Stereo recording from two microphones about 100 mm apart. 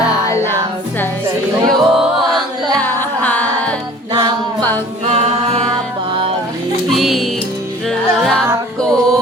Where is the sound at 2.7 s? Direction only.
20° left (ahead or behind).